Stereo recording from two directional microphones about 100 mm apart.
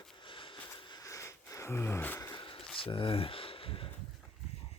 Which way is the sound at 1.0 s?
30° left (ahead or behind).